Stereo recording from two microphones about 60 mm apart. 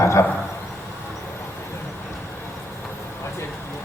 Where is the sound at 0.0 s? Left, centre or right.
Left.